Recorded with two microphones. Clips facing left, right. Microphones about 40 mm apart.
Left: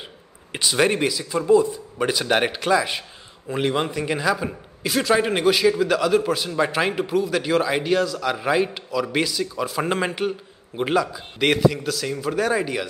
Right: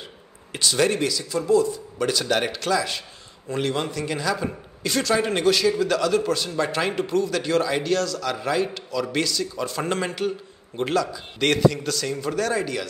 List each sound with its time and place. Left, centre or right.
0.5 s a man's voice: centre